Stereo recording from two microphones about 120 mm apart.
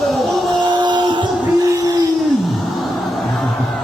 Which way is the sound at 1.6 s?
30° right (ahead or behind).